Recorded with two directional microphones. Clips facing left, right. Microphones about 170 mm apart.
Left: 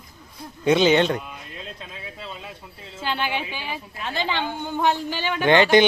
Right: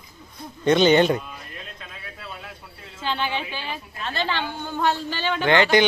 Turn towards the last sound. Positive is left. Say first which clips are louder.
# left 2 dB
turn(degrees=20)  # may be behind; listen again after turning